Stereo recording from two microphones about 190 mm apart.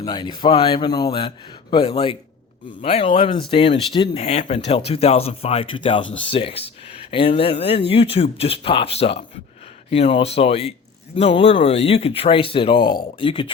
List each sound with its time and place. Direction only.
0.0 s speech: 25° left (ahead or behind)